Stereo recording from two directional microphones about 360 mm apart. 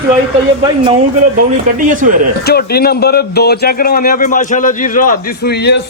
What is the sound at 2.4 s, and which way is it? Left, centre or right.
A man's voice, left.